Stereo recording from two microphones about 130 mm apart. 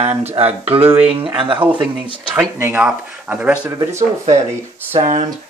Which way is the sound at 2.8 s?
5° right (ahead or behind).